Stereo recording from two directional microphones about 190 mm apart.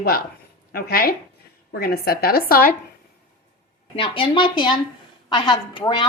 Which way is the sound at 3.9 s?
30° left (ahead or behind).